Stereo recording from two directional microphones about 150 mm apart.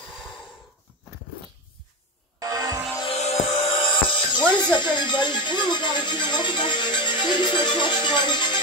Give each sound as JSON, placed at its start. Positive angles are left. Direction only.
{"t": 2.4, "sound": "music", "side_deg": -25}
{"t": 3.1, "sound": "music", "side_deg": 45}
{"t": 3.9, "sound": "music", "side_deg": 35}
{"t": 4.6, "sound": "speech", "side_deg": 30}